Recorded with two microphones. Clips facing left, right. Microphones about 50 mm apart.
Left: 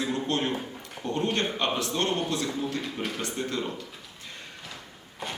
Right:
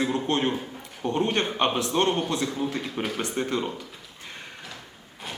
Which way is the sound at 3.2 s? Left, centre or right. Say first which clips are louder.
Right 4 dB; right.